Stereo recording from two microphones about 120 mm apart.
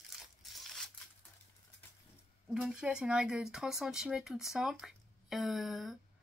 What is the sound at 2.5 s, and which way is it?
Speech, 5° right (ahead or behind).